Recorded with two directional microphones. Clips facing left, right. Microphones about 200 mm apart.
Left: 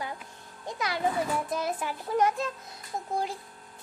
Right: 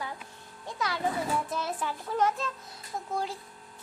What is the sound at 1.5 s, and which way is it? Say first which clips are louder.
Speech: left 2 dB; 15° left (ahead or behind).